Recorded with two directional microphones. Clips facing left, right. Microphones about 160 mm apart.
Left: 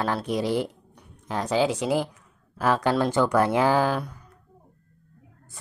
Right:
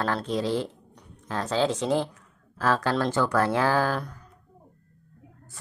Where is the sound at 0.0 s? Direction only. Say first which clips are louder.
Left 1 dB; 10° left (ahead or behind).